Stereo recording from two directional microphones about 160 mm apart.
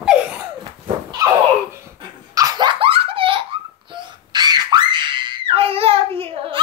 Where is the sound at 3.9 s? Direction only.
25° right (ahead or behind).